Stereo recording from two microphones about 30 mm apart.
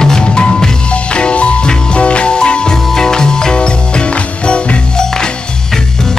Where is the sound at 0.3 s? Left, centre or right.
Left.